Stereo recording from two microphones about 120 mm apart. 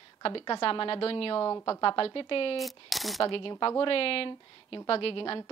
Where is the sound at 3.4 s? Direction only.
45° left (ahead or behind).